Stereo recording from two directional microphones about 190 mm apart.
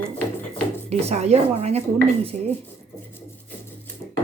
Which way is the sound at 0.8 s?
35° right (ahead or behind).